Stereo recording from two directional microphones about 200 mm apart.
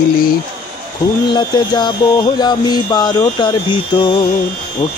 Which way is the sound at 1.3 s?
20° left (ahead or behind).